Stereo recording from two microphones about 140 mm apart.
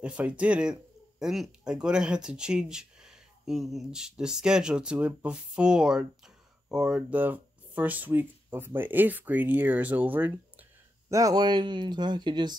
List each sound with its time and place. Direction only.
0.0 s speech: 10° right (ahead or behind)
11.1 s speech: 25° right (ahead or behind)